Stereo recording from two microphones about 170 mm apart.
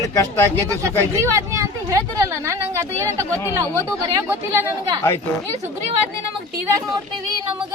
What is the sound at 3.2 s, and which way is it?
Speech, 15° left (ahead or behind).